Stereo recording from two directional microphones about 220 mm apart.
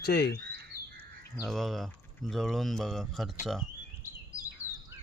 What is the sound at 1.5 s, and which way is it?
Speech, centre (ahead or behind).